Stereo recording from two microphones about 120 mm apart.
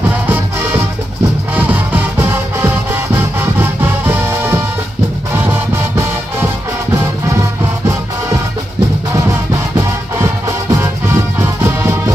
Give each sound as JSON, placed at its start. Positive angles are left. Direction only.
{"t": 0.3, "sound": "music", "side_deg": -15}
{"t": 9.8, "sound": "music", "side_deg": -25}